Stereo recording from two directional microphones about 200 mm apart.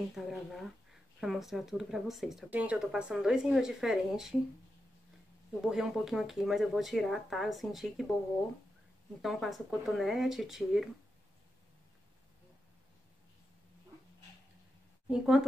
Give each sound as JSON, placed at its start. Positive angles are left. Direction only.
{"t": 0.1, "sound": "speech", "side_deg": 0}
{"t": 5.7, "sound": "speech", "side_deg": 0}
{"t": 9.2, "sound": "speech", "side_deg": 0}
{"t": 15.0, "sound": "speech", "side_deg": -5}